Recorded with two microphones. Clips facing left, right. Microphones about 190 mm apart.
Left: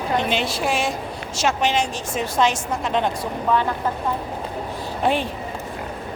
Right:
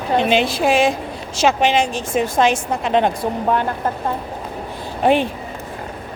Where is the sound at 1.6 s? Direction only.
55° right (ahead or behind).